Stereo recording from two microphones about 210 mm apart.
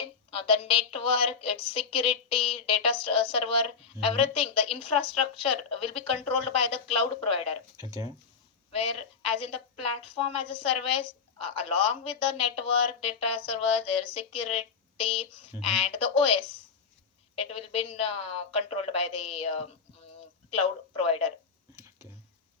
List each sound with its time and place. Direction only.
0.0 s a woman's voice: 25° left (ahead or behind)
8.7 s a woman's voice: 25° left (ahead or behind)